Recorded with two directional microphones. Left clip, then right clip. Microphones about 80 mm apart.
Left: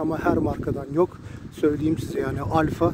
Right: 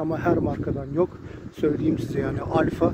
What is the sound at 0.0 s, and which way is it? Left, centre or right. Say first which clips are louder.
Speech: even; left.